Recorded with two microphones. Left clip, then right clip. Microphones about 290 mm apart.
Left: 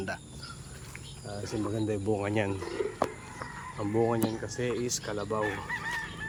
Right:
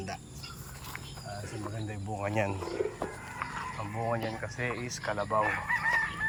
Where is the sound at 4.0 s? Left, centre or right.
Centre.